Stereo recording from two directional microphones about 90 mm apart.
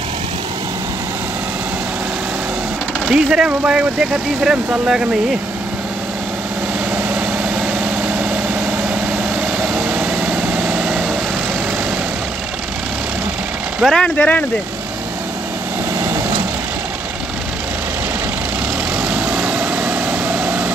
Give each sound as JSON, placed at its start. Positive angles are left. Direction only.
{"t": 3.1, "sound": "speech", "side_deg": -10}
{"t": 9.8, "sound": "vehicle", "side_deg": -15}
{"t": 13.8, "sound": "speech", "side_deg": 5}
{"t": 14.1, "sound": "speech", "side_deg": 15}
{"t": 19.1, "sound": "vehicle", "side_deg": -15}